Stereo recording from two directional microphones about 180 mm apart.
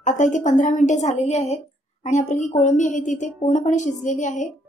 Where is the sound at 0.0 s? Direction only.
45° left (ahead or behind).